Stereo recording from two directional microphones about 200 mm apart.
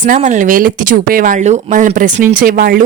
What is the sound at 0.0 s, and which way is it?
Speech, 40° right (ahead or behind).